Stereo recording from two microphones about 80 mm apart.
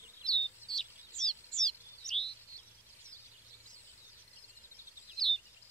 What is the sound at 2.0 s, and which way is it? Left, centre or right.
Chirp, left.